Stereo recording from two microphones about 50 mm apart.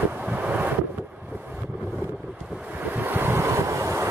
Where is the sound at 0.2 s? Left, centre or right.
Right.